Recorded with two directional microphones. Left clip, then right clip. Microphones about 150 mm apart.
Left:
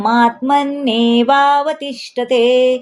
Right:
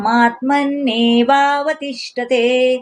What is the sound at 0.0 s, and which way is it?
A woman's voice, 35° left (ahead or behind).